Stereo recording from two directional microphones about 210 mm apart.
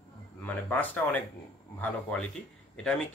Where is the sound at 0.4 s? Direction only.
10° left (ahead or behind).